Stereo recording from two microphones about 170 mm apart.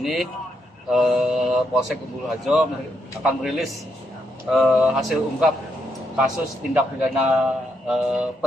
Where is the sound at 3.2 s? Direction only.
Centre (ahead or behind).